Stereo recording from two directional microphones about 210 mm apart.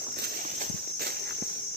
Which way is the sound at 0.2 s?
45° right (ahead or behind).